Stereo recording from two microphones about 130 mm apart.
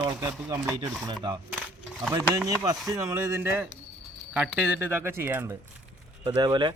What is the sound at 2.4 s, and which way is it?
Speech, 25° right (ahead or behind).